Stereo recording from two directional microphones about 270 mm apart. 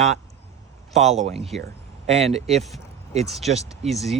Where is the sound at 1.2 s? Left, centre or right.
Right.